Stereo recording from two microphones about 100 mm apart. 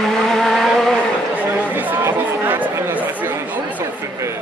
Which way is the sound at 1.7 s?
20° right (ahead or behind).